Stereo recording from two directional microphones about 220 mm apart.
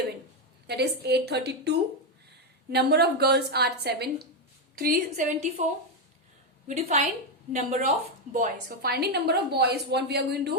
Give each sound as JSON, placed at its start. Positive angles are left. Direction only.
{"t": 0.7, "sound": "a woman's voice", "side_deg": -50}
{"t": 6.7, "sound": "a woman's voice", "side_deg": -30}